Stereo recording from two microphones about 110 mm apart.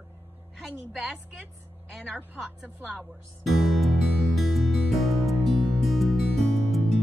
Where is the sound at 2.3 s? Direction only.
10° right (ahead or behind).